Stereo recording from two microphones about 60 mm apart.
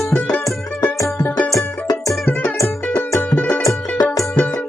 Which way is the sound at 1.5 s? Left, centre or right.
Left.